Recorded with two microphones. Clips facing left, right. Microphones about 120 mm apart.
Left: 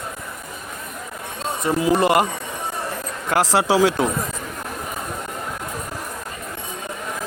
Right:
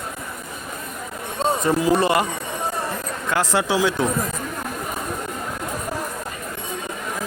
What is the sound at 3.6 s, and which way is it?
Speech, 35° left (ahead or behind).